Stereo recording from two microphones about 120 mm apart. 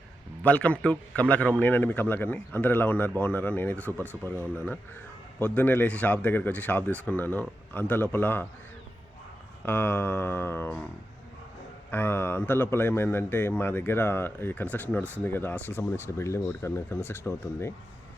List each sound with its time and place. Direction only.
0.4 s speech: 10° left (ahead or behind)
9.6 s speech: 20° left (ahead or behind)
11.9 s speech: 20° left (ahead or behind)